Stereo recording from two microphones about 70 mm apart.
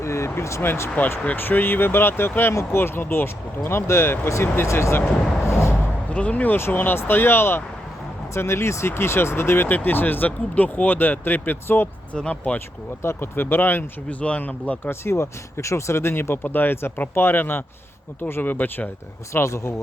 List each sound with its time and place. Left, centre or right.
0.0 s a sound: left
0.9 s speech: left
5.5 s a sound: left
6.1 s speech: centre
12.1 s speech: centre
12.5 s speech: left
14.2 s speech: centre
14.8 s speech: left
19.3 s speech: left